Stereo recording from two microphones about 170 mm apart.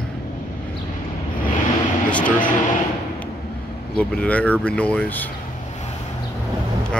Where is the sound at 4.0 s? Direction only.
5° left (ahead or behind).